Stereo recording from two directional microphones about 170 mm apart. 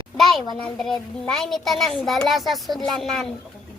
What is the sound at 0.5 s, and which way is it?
A child's voice, centre (ahead or behind).